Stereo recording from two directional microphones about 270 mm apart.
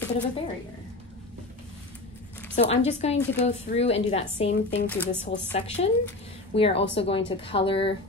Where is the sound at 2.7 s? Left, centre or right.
Left.